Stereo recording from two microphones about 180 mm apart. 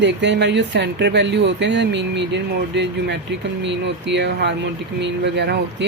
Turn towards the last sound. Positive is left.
turn(degrees=-70)  # may be behind; listen again after turning